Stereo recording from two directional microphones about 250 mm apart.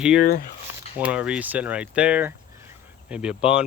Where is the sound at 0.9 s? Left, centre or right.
Centre.